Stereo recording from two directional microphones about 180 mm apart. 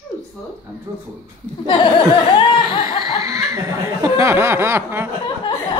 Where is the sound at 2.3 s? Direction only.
25° left (ahead or behind).